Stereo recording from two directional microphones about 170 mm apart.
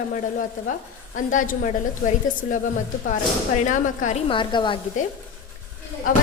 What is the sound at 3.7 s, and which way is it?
Speech, 50° left (ahead or behind).